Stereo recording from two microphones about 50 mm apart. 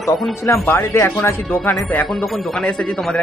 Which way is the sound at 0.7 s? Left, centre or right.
Left.